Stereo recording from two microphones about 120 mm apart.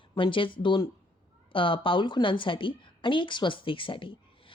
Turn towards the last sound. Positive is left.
turn(degrees=45)  # may be behind; listen again after turning